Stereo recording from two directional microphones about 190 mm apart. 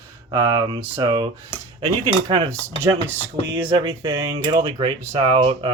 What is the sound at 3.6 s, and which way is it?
Speech, 25° right (ahead or behind).